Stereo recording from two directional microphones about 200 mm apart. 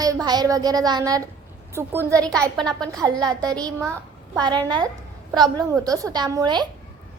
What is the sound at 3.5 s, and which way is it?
Speech, 5° left (ahead or behind).